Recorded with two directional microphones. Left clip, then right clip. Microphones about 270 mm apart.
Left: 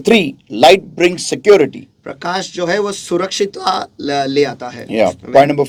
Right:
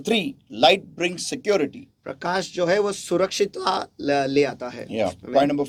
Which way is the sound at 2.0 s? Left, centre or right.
Right.